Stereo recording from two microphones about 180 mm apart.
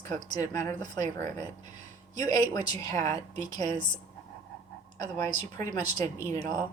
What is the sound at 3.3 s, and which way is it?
Speech, 40° right (ahead or behind).